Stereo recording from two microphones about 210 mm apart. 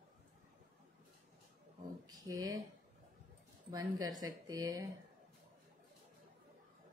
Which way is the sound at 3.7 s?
20° right (ahead or behind).